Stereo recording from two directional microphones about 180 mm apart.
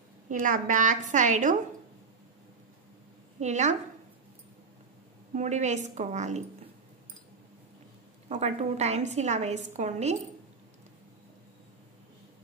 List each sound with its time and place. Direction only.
0.3 s a woman's voice: 45° right (ahead or behind)
3.3 s a woman's voice: 40° right (ahead or behind)
5.3 s a woman's voice: 40° right (ahead or behind)
8.3 s a woman's voice: 35° right (ahead or behind)